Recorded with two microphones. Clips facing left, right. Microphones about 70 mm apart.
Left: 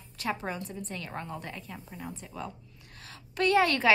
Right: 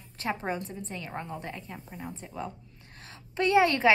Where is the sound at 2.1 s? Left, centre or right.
Right.